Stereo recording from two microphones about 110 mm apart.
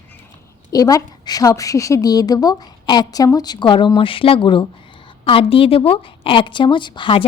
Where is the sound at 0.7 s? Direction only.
35° left (ahead or behind).